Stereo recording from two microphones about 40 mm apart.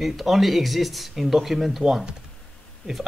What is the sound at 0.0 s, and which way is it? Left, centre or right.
Speech, centre.